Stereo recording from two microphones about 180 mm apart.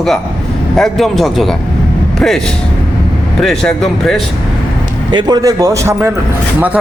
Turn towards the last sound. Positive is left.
turn(degrees=-15)  # may be behind; listen again after turning